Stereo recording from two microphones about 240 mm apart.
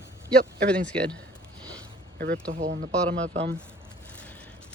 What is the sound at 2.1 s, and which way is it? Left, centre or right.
Speech, right.